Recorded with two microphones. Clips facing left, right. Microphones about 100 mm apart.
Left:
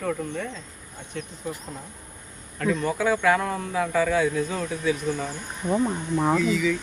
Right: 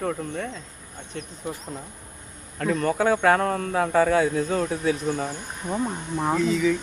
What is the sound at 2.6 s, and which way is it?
Speech, 50° right (ahead or behind).